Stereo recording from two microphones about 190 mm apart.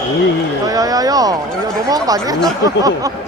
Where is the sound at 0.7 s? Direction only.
20° right (ahead or behind).